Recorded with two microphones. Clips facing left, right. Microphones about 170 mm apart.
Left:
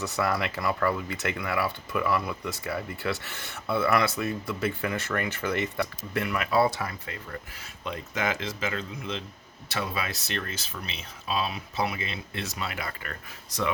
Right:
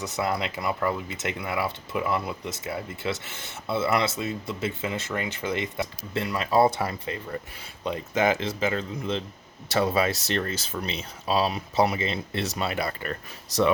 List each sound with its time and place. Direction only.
0.0 s speech: 20° right (ahead or behind)
6.1 s speech: 30° right (ahead or behind)